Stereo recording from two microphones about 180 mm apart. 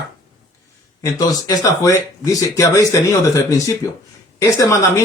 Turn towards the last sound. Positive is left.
turn(degrees=15)  # may be behind; listen again after turning